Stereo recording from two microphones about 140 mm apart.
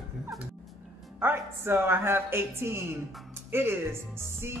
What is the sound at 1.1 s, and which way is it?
A man's voice, 15° right (ahead or behind).